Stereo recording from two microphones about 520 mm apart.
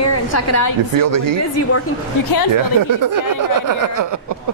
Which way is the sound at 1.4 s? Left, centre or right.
Left.